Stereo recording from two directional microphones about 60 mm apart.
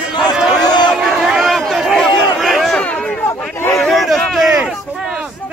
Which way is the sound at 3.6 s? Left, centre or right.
Left.